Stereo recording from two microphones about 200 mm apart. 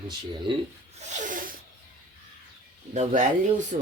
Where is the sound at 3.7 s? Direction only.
35° right (ahead or behind).